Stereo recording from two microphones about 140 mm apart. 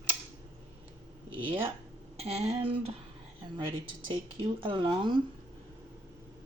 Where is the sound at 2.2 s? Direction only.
50° right (ahead or behind).